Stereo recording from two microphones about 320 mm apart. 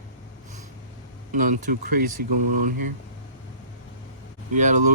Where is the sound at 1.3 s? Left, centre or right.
Right.